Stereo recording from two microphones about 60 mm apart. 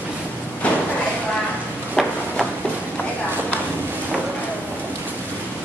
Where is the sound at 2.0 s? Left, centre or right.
Centre.